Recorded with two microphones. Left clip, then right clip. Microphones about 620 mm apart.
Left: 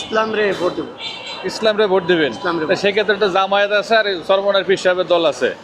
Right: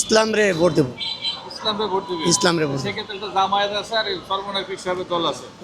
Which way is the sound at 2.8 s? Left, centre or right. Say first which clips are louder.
Left 13 dB; left.